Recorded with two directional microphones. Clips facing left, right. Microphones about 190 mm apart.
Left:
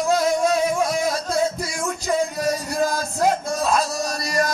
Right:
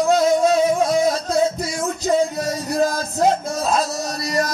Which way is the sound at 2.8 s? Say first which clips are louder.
Right 2 dB; 25° right (ahead or behind).